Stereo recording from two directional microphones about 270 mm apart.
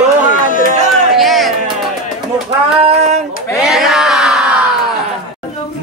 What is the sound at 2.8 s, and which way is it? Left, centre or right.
Female singing, right.